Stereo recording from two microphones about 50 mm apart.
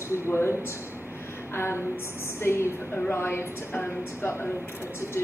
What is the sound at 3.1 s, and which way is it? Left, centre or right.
A woman's voice, left.